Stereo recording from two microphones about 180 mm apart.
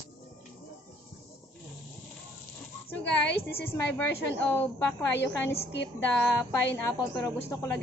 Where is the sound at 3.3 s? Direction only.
60° left (ahead or behind).